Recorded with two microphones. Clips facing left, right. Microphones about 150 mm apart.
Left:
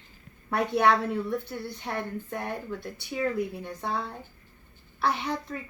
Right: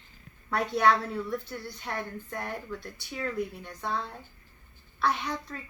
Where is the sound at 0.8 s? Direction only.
25° left (ahead or behind).